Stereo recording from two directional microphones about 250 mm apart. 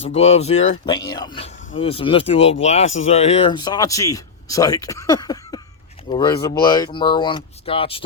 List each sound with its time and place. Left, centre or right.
0.1 s speech: left